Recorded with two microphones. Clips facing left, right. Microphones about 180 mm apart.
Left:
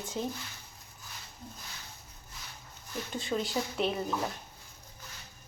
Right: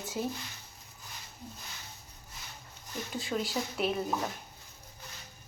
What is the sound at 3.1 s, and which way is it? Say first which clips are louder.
Speech: left 1 dB; centre (ahead or behind).